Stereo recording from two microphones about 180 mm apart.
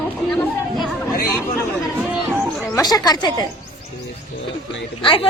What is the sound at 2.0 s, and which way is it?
Chatter, 10° right (ahead or behind).